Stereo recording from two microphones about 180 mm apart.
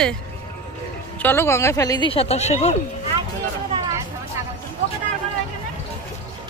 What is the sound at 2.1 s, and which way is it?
Speech, 35° left (ahead or behind).